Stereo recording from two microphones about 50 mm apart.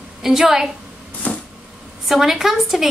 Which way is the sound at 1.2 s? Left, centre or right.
Left.